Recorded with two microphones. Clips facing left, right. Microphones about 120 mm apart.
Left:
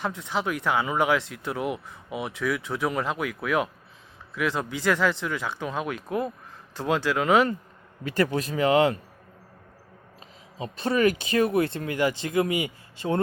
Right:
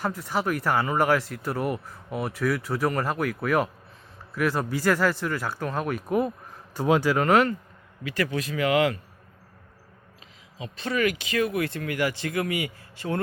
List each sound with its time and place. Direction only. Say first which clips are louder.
0.0 s speech: right 1 dB; 5° right (ahead or behind)
7.2 s speech: left 2 dB; centre (ahead or behind)
8.3 s speech: even; 30° left (ahead or behind)
10.6 s speech: left 3 dB; 35° left (ahead or behind)